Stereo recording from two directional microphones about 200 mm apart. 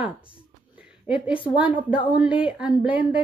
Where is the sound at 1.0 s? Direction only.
5° right (ahead or behind).